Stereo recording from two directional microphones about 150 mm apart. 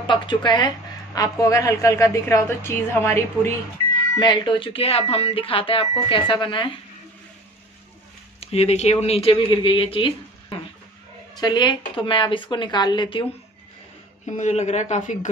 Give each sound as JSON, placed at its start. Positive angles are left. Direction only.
{"t": 0.0, "sound": "a woman's voice", "side_deg": 30}
{"t": 4.2, "sound": "speech", "side_deg": 30}
{"t": 8.4, "sound": "speech", "side_deg": 45}
{"t": 11.3, "sound": "a woman's voice", "side_deg": 30}
{"t": 14.3, "sound": "speech", "side_deg": 50}